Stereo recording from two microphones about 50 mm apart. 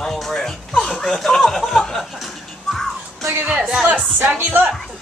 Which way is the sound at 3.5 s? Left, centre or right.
Centre.